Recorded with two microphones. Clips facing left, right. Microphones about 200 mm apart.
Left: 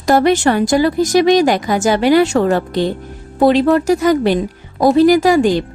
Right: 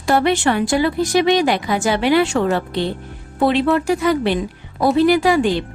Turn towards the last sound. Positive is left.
turn(degrees=40)  # may be behind; listen again after turning